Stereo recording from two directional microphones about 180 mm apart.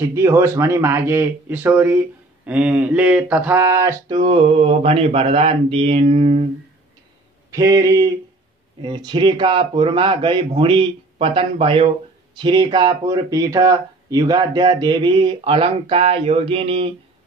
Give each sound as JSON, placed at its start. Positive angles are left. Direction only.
{"t": 0.1, "sound": "speech", "side_deg": -15}
{"t": 4.2, "sound": "mantra", "side_deg": -30}
{"t": 7.5, "sound": "speech", "side_deg": -20}